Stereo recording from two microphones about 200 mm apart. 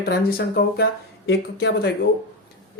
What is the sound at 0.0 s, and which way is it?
Speech, 50° left (ahead or behind).